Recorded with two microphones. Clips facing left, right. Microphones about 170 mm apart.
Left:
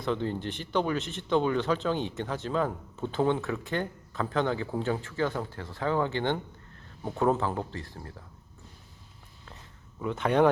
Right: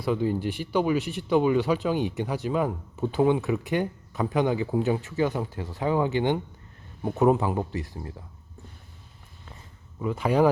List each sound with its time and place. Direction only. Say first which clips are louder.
0.0 s speech: right 5 dB; 10° right (ahead or behind)
10.0 s speech: right 2 dB; 5° right (ahead or behind)